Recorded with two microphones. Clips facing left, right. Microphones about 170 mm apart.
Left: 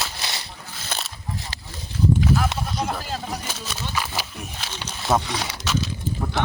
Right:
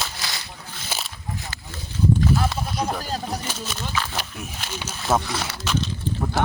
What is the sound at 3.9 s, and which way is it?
Pig, 10° left (ahead or behind).